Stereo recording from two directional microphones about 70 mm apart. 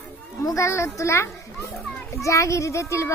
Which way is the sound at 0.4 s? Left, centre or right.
Left.